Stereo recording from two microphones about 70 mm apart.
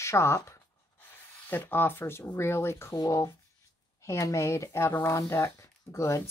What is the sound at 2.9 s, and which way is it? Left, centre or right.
Speech, left.